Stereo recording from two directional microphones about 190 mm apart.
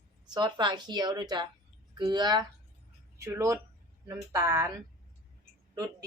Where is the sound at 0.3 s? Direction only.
20° right (ahead or behind).